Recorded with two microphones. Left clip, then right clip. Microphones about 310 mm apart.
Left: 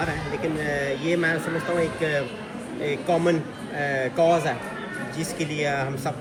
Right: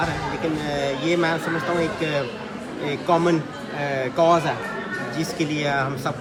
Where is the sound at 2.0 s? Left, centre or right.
Centre.